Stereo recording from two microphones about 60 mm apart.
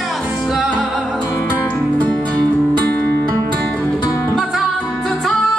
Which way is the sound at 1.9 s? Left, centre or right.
Left.